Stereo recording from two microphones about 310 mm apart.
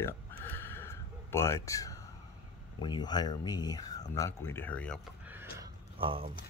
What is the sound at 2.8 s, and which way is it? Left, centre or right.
Speech, centre.